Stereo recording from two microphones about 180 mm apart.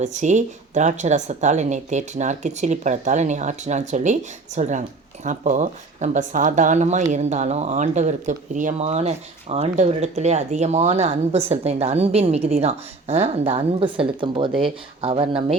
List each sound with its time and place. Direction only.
0.0 s speech: 40° right (ahead or behind)